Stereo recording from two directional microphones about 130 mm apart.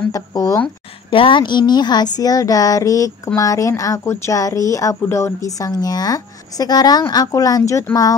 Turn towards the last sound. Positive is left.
turn(degrees=25)  # may be behind; listen again after turning